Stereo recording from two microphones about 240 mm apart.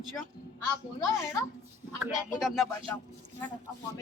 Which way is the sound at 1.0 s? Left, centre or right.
Centre.